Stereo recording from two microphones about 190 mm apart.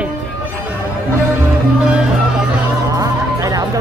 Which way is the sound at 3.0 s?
20° right (ahead or behind).